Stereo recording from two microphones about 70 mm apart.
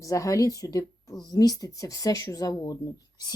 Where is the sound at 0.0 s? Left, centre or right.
Left.